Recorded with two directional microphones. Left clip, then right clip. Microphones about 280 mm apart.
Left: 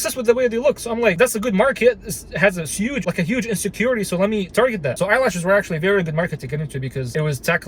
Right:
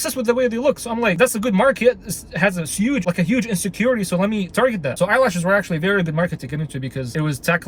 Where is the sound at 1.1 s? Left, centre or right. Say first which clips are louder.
Even; centre.